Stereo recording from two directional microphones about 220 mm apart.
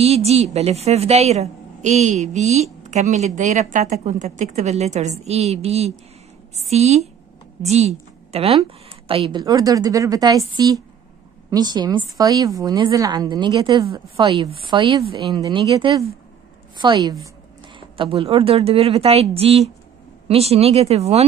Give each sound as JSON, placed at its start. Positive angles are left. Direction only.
{"t": 0.0, "sound": "a woman's voice", "side_deg": -30}